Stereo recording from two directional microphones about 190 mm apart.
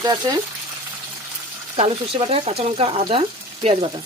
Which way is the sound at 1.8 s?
30° right (ahead or behind).